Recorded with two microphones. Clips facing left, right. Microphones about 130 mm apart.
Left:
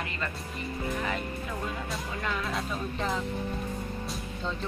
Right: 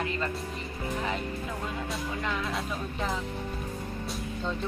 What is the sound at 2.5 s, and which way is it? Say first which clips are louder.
Speech: left 1 dB; centre (ahead or behind).